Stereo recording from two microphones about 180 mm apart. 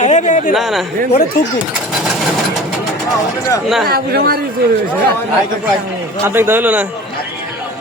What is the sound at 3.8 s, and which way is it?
Speech, 55° right (ahead or behind).